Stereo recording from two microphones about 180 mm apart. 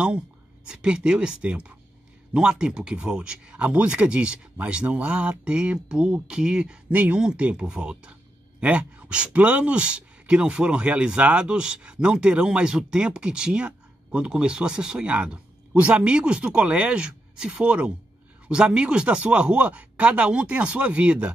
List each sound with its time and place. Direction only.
0.7 s speech: 5° right (ahead or behind)